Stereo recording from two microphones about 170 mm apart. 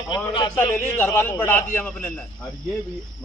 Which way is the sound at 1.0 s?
10° left (ahead or behind).